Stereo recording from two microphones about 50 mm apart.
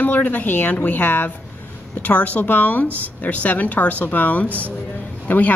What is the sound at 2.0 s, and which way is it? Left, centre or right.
Speech, left.